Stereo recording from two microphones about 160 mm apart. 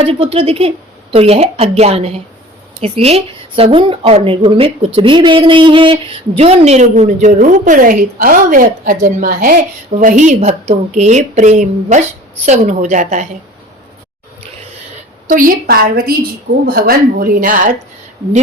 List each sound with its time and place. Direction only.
0.0 s a woman's voice: 35° right (ahead or behind)
15.3 s a woman's voice: 60° right (ahead or behind)